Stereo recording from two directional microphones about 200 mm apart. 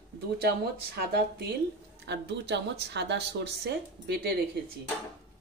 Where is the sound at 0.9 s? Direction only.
50° right (ahead or behind).